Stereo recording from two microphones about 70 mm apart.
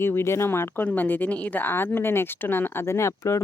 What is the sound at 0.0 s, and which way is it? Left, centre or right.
A woman's voice, left.